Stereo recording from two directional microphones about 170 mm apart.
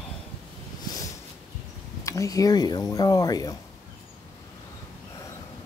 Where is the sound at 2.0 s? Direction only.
20° left (ahead or behind).